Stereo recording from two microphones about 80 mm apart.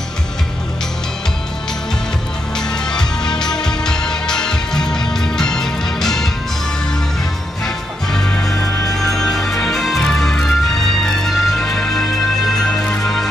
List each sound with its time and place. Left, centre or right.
2.9 s music: centre
7.6 s music: centre